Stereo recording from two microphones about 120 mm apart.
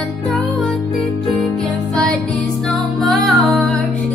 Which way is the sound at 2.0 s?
10° left (ahead or behind).